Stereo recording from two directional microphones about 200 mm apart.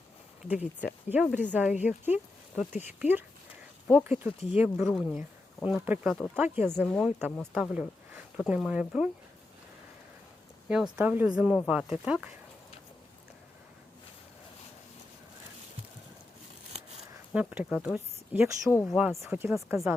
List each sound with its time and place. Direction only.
0.4 s speech: 5° right (ahead or behind)
4.3 s speech: 30° left (ahead or behind)
4.5 s speech: 5° right (ahead or behind)
6.3 s speech: 10° right (ahead or behind)
6.7 s speech: 5° left (ahead or behind)
10.7 s speech: 5° right (ahead or behind)
17.3 s speech: 5° right (ahead or behind)